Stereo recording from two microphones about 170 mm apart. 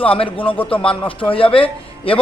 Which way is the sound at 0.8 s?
30° left (ahead or behind).